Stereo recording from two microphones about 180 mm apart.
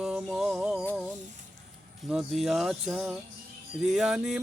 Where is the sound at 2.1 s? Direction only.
Centre (ahead or behind).